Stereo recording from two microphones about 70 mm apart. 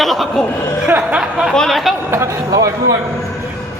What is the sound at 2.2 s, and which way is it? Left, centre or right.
Speech, right.